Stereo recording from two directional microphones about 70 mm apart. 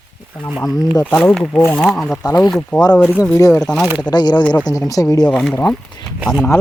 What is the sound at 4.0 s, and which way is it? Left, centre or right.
Speech, left.